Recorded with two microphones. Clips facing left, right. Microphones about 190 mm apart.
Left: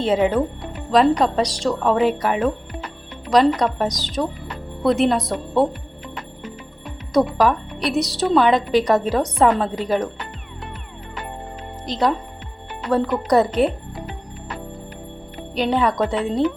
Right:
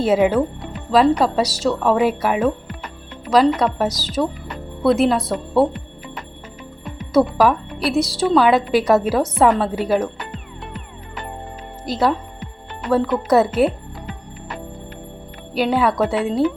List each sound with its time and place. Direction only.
0.0 s a woman's voice: 5° right (ahead or behind)
7.1 s a woman's voice: 5° right (ahead or behind)
11.9 s a woman's voice: 5° right (ahead or behind)
15.5 s a woman's voice: 5° right (ahead or behind)